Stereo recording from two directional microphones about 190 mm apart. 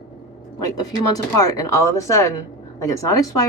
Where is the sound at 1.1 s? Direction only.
20° left (ahead or behind).